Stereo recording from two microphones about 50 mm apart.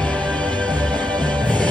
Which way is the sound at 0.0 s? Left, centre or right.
Left.